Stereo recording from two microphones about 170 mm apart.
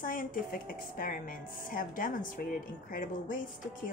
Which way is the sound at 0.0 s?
55° left (ahead or behind).